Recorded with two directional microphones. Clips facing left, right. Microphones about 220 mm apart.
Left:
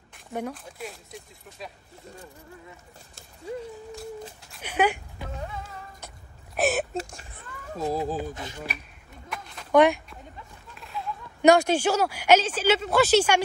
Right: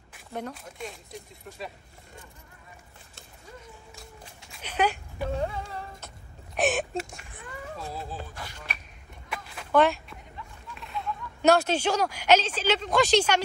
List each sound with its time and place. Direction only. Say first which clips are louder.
0.3 s speech: left 3 dB; 5° left (ahead or behind)
4.4 s speech: left 2 dB; 5° left (ahead or behind)
5.3 s music: right 6 dB; 30° right (ahead or behind)
6.5 s a sound: left 1 dB; centre (ahead or behind)
7.7 s speech: left 12 dB; 40° left (ahead or behind)
8.2 s speech: left 8 dB; 20° left (ahead or behind)
9.3 s a sound: even; 5° right (ahead or behind)
9.7 s speech: left 3 dB; 15° left (ahead or behind)
10.7 s a sound: even; centre (ahead or behind)
11.4 s speech: left 3 dB; 15° left (ahead or behind)